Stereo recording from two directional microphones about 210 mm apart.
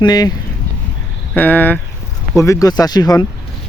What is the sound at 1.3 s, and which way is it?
Speech, 10° left (ahead or behind).